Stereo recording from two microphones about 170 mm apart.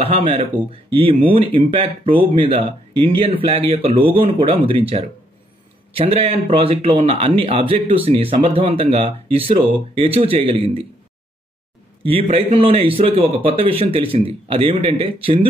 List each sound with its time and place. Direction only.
0.0 s speech: 35° right (ahead or behind)
12.0 s speech: 35° right (ahead or behind)